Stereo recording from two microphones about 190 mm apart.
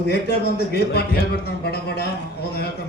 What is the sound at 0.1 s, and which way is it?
A man's voice, 60° left (ahead or behind).